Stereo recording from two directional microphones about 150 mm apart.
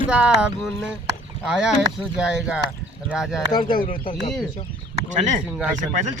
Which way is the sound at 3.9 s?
35° left (ahead or behind).